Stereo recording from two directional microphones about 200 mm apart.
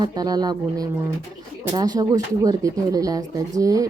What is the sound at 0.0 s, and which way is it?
Speech, 20° right (ahead or behind).